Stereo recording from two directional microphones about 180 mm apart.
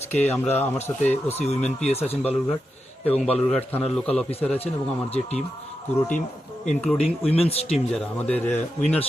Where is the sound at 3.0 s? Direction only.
5° left (ahead or behind).